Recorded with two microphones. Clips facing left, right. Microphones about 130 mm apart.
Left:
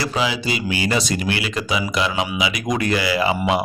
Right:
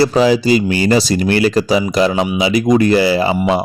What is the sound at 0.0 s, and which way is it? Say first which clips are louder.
Speech: right 11 dB; 40° right (ahead or behind).